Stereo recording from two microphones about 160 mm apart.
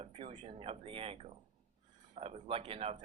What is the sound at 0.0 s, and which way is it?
Speech, 35° right (ahead or behind).